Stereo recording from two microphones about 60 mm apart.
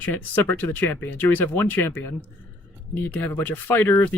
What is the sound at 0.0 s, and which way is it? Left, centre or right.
Speech, left.